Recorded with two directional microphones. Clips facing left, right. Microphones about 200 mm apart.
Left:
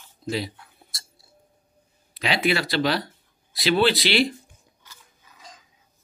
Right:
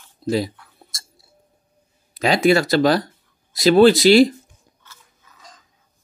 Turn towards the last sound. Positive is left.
turn(degrees=15)  # may be behind; listen again after turning